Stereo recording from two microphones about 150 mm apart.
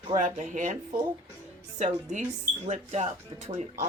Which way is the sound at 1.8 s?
50° right (ahead or behind).